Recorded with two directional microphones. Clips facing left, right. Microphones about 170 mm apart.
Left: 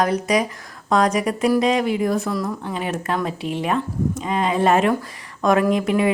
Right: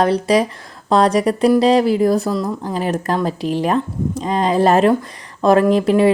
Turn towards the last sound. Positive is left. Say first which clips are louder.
# right 5 dB
turn(degrees=-30)  # may be behind; listen again after turning